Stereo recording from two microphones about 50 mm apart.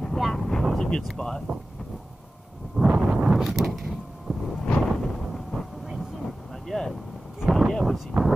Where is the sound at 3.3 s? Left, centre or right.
Centre.